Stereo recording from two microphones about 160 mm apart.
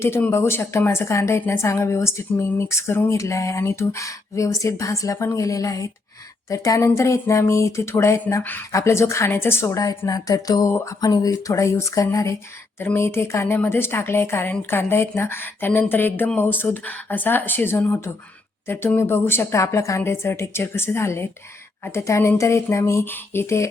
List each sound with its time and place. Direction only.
0.0 s a woman's voice: 15° left (ahead or behind)